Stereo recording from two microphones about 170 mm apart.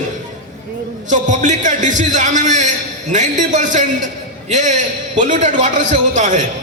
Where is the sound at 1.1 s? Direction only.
45° right (ahead or behind).